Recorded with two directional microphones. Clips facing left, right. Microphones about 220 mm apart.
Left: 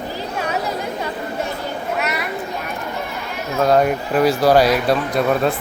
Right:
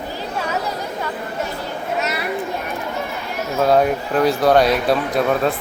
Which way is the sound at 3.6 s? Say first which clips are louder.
Even; centre (ahead or behind).